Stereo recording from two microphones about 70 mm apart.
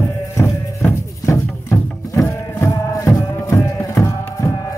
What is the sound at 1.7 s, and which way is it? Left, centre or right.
Music, left.